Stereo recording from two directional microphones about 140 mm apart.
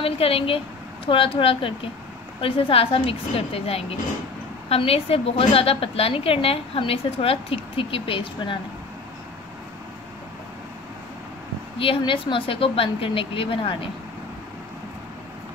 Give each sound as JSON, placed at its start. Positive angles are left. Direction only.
{"t": 0.0, "sound": "a woman's voice", "side_deg": 40}
{"t": 11.8, "sound": "a woman's voice", "side_deg": 40}